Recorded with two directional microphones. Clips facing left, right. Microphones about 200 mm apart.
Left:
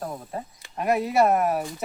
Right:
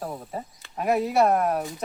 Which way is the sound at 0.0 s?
5° right (ahead or behind).